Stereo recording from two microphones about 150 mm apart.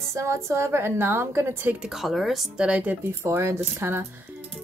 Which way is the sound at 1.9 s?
Centre (ahead or behind).